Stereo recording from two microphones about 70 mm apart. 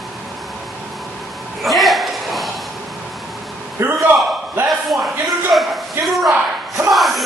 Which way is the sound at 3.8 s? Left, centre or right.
Right.